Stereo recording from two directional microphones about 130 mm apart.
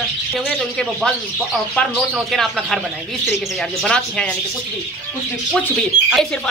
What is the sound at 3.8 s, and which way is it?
Speech, 5° left (ahead or behind).